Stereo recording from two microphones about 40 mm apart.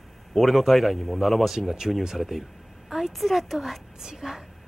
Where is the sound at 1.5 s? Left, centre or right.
Centre.